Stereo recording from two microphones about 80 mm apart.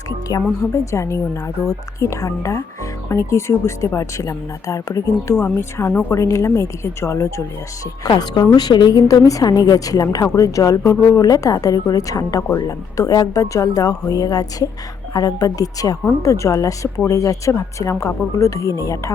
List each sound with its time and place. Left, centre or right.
0.6 s speech: left
8.0 s a woman's voice: left